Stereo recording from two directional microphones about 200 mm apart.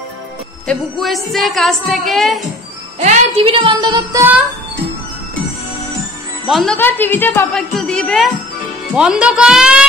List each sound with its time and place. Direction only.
0.7 s a woman's voice: centre (ahead or behind)
3.0 s speech: 30° right (ahead or behind)
6.4 s a woman's voice: centre (ahead or behind)